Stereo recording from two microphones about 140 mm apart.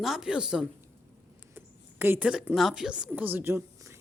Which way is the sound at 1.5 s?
15° right (ahead or behind).